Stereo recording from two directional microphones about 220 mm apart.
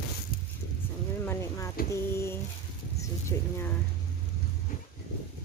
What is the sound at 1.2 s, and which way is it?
Speech, 10° left (ahead or behind).